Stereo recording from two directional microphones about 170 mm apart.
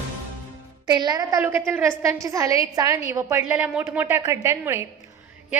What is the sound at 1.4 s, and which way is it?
A woman's voice, 15° right (ahead or behind).